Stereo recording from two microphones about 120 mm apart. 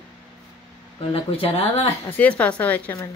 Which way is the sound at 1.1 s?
55° left (ahead or behind).